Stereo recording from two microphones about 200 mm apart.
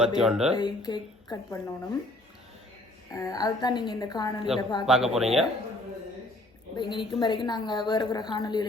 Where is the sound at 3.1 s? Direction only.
15° left (ahead or behind).